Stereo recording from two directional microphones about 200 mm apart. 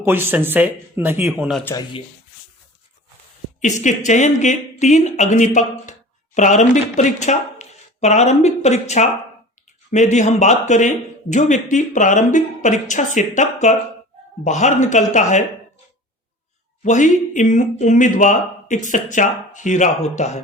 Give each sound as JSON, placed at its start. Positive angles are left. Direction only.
{"t": 0.0, "sound": "speech", "side_deg": -10}
{"t": 3.6, "sound": "speech", "side_deg": 35}
{"t": 16.8, "sound": "speech", "side_deg": 40}